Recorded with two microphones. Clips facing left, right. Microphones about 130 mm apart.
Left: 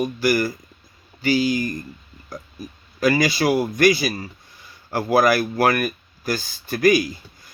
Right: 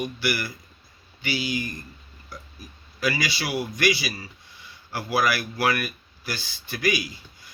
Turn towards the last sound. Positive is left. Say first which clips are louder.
# left 9 dB
turn(degrees=45)  # may be behind; listen again after turning